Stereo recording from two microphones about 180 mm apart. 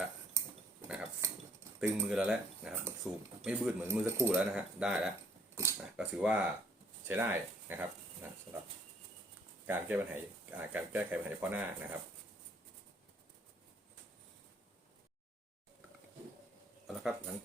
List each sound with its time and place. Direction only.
0.9 s cutlery: 5° right (ahead or behind)
2.0 s speech: 5° right (ahead or behind)
5.5 s a sound: 10° right (ahead or behind)
7.1 s speech: 10° right (ahead or behind)
9.6 s speech: 10° right (ahead or behind)
16.8 s a sound: centre (ahead or behind)